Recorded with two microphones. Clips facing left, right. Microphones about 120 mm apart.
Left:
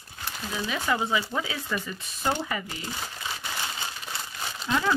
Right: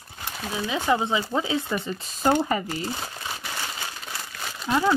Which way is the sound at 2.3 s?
40° right (ahead or behind).